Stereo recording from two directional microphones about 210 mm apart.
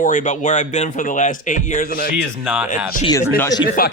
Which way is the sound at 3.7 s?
45° left (ahead or behind).